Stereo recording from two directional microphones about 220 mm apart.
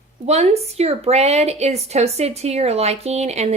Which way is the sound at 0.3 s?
30° right (ahead or behind).